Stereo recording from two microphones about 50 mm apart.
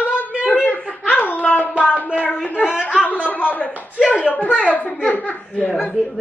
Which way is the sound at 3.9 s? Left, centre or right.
Right.